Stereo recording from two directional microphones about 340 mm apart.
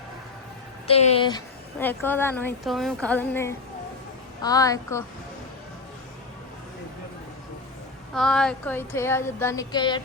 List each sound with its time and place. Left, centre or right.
0.9 s a woman's voice: centre
8.1 s speech: centre